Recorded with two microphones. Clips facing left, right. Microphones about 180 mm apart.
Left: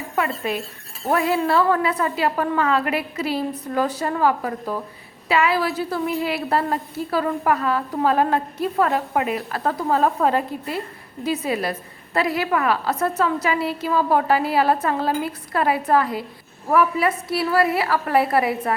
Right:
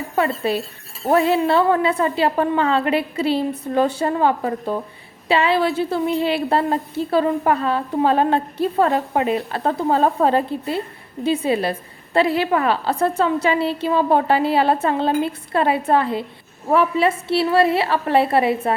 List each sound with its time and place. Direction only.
0.2 s a woman's voice: 30° right (ahead or behind)